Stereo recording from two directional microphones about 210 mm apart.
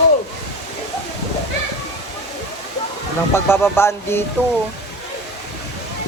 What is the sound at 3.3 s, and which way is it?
Speech, 10° left (ahead or behind).